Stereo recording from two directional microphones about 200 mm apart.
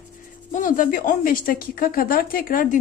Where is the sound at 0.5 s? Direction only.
40° left (ahead or behind).